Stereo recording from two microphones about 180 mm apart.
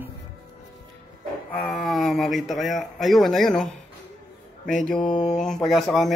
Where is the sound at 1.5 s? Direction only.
5° left (ahead or behind).